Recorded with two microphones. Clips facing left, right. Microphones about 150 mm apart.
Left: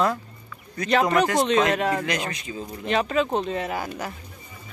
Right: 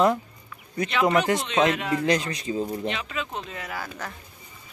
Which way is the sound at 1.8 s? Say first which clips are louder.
Left 3 dB; 40° left (ahead or behind).